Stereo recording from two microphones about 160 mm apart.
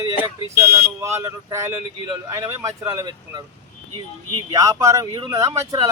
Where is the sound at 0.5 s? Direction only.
15° right (ahead or behind).